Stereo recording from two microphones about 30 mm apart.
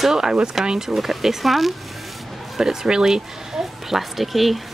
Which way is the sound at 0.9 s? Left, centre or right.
Centre.